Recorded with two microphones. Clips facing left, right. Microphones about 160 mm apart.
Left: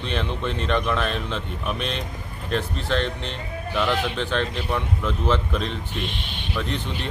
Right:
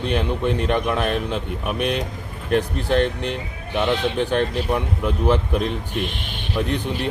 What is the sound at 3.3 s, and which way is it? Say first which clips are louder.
Speech: right 3 dB; 20° right (ahead or behind).